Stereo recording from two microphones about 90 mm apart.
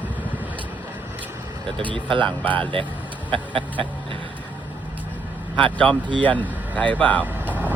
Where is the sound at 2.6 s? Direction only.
70° right (ahead or behind).